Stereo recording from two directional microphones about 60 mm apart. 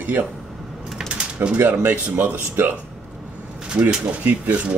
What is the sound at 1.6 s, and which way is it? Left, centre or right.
Speech, right.